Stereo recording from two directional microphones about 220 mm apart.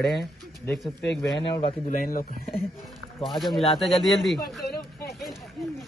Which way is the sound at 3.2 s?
Centre (ahead or behind).